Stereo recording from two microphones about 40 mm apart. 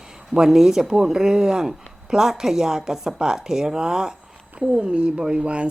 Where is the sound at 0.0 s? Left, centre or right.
Centre.